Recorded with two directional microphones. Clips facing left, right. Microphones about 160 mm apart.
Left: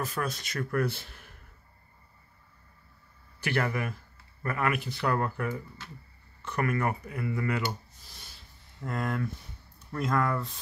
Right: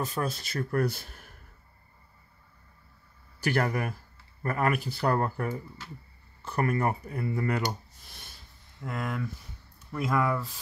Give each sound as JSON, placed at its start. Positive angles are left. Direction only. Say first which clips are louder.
{"t": 0.0, "sound": "speech", "louder": "right 2 dB", "side_deg": -25}
{"t": 3.3, "sound": "speech", "louder": "right 2 dB", "side_deg": -40}
{"t": 8.0, "sound": "rub", "louder": "right 1 dB", "side_deg": -55}
{"t": 8.8, "sound": "speech", "louder": "left 2 dB", "side_deg": 0}